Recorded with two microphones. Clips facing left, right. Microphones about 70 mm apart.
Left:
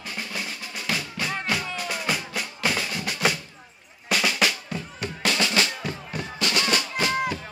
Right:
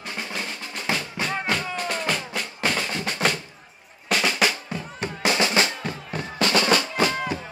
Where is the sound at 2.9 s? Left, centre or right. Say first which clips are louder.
Right 2 dB; right.